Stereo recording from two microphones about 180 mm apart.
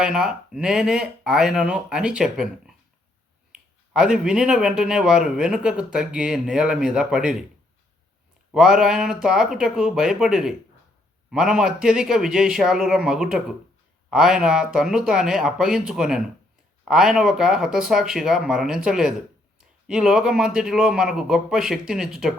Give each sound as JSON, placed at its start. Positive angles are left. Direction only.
{"t": 0.0, "sound": "speech", "side_deg": -5}
{"t": 8.5, "sound": "speech", "side_deg": -5}